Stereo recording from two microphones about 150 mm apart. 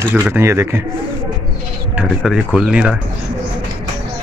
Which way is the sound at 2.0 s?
5° right (ahead or behind).